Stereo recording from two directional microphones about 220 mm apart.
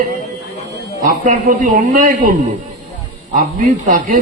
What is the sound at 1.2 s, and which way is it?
A man's voice, 35° right (ahead or behind).